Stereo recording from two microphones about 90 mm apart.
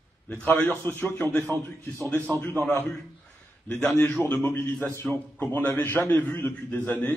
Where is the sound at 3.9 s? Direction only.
25° left (ahead or behind).